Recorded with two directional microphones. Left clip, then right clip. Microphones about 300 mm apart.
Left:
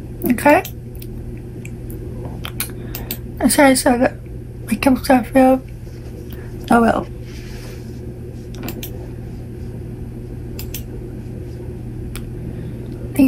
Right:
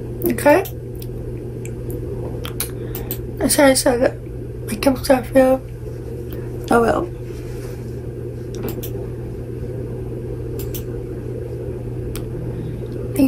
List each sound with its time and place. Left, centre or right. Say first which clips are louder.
0.2 s a woman's voice: left 1 dB; centre
3.3 s a woman's voice: left 1 dB; centre
6.7 s a woman's voice: left 1 dB; left